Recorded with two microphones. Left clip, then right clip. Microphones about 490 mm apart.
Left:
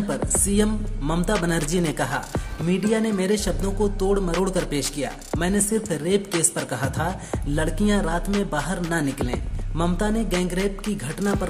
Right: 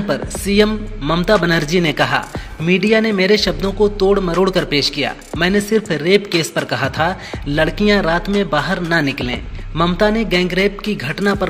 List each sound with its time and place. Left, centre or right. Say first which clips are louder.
0.1 s speech: right 8 dB; left